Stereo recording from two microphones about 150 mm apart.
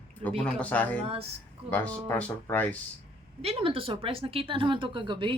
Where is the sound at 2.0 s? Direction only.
10° left (ahead or behind).